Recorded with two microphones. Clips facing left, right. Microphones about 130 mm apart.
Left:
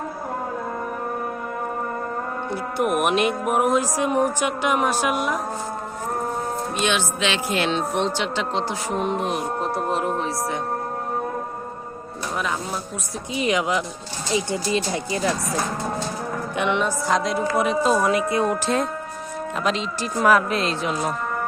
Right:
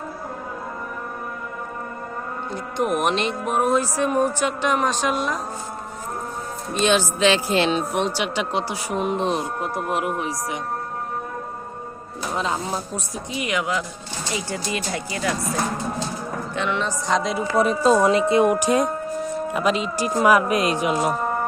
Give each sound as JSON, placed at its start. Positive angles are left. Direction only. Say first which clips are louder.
{"t": 2.7, "sound": "speech", "louder": "left 1 dB", "side_deg": 10}
{"t": 6.7, "sound": "speech", "louder": "right 6 dB", "side_deg": -35}
{"t": 7.7, "sound": "speech", "louder": "even", "side_deg": -10}
{"t": 9.1, "sound": "speech", "louder": "right 2 dB", "side_deg": -30}
{"t": 13.3, "sound": "speech", "louder": "left 3 dB", "side_deg": 20}
{"t": 16.6, "sound": "speech", "louder": "left 3 dB", "side_deg": 20}
{"t": 17.1, "sound": "speech", "louder": "right 1 dB", "side_deg": 0}
{"t": 17.6, "sound": "speech", "louder": "right 4 dB", "side_deg": -35}
{"t": 18.5, "sound": "speech", "louder": "right 3 dB", "side_deg": -10}